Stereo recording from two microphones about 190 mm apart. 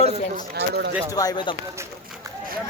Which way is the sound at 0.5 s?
60° right (ahead or behind).